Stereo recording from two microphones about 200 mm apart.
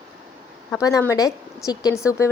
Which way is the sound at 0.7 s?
15° left (ahead or behind).